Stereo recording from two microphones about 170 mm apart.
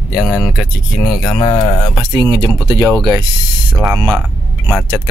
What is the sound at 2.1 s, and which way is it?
Speech, 25° right (ahead or behind).